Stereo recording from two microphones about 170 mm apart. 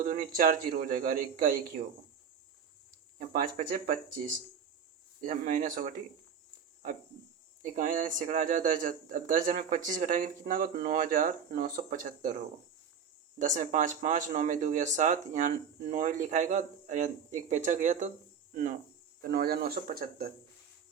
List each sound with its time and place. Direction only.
0.0 s speech: 55° right (ahead or behind)
3.2 s speech: 55° right (ahead or behind)
5.2 s speech: 50° right (ahead or behind)
7.6 s speech: 50° right (ahead or behind)
10.4 s speech: 65° right (ahead or behind)
13.4 s speech: 45° right (ahead or behind)
19.2 s speech: 60° right (ahead or behind)